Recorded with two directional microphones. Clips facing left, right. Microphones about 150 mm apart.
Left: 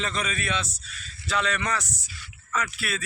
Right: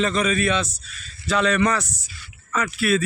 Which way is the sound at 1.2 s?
90° right.